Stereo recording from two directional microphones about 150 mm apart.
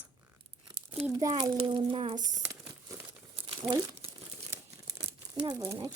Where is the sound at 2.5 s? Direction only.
25° right (ahead or behind).